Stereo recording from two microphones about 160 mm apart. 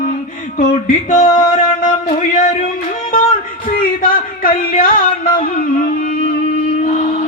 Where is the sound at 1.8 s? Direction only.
50° left (ahead or behind).